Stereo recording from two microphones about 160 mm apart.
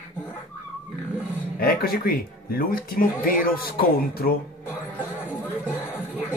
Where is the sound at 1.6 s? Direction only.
70° left (ahead or behind).